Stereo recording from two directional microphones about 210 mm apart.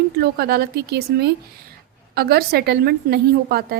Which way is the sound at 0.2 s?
45° right (ahead or behind).